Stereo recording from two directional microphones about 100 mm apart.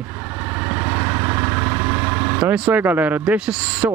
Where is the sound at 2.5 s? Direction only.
15° right (ahead or behind).